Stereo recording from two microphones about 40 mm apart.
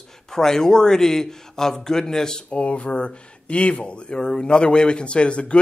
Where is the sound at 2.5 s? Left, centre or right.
Left.